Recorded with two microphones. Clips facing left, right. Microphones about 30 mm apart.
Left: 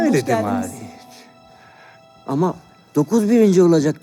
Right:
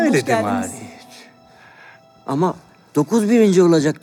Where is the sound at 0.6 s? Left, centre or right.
Centre.